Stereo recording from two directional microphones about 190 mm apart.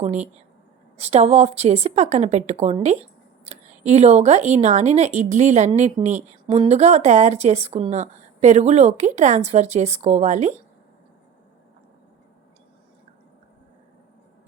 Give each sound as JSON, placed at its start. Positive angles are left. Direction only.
{"t": 0.0, "sound": "speech", "side_deg": -35}